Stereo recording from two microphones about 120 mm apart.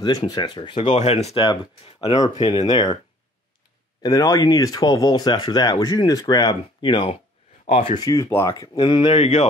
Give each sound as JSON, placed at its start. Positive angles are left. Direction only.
{"t": 0.0, "sound": "speech", "side_deg": 35}
{"t": 0.8, "sound": "speech", "side_deg": 65}
{"t": 1.3, "sound": "speech", "side_deg": 40}
{"t": 4.0, "sound": "speech", "side_deg": 30}
{"t": 7.6, "sound": "speech", "side_deg": 65}
{"t": 8.0, "sound": "speech", "side_deg": 30}
{"t": 8.9, "sound": "speech", "side_deg": 45}
{"t": 9.2, "sound": "speech", "side_deg": 65}